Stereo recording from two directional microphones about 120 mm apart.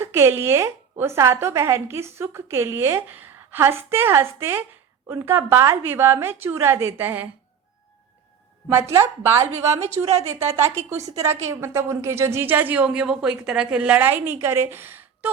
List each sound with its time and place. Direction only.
0.0 s a woman's voice: 20° right (ahead or behind)
8.7 s a woman's voice: 20° right (ahead or behind)